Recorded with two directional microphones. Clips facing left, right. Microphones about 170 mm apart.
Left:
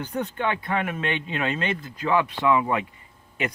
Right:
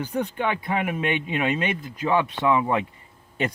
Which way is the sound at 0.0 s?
10° right (ahead or behind).